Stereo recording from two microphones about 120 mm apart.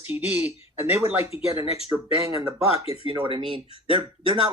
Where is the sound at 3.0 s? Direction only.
45° right (ahead or behind).